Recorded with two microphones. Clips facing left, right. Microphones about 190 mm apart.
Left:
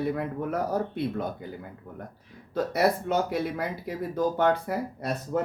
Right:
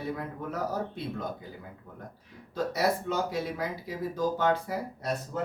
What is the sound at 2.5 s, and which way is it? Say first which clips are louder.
Speech: left 4 dB; 60° left (ahead or behind).